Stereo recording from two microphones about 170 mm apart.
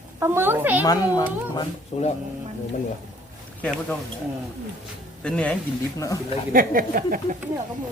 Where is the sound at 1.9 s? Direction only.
40° left (ahead or behind).